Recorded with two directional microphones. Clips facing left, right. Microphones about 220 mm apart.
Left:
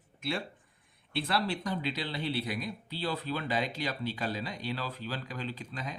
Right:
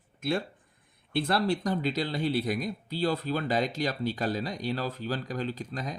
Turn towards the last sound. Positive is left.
turn(degrees=-40)  # may be behind; listen again after turning